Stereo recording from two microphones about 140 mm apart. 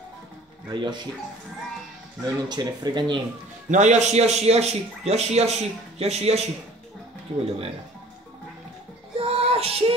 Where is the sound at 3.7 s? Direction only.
55° right (ahead or behind).